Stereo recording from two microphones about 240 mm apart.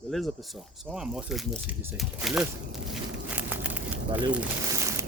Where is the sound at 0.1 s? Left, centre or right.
Centre.